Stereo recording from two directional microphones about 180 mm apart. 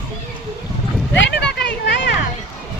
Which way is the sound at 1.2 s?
75° left (ahead or behind).